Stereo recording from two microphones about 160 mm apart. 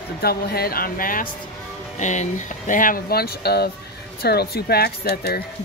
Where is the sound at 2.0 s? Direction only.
50° left (ahead or behind).